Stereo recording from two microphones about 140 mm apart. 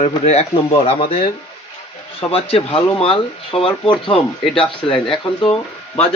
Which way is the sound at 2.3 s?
45° left (ahead or behind).